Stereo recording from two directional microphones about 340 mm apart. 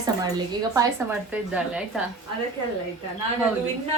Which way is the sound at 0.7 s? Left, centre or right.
Centre.